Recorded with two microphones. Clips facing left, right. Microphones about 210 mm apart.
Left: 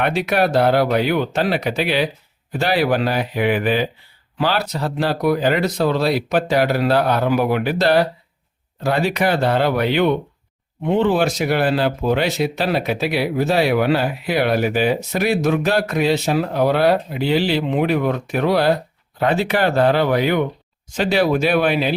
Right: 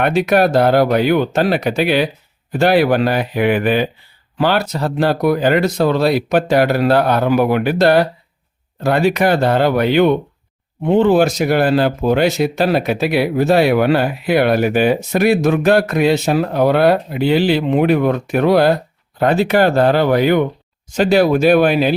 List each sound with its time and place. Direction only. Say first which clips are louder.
0.0 s speech: right 5 dB; 45° right (ahead or behind)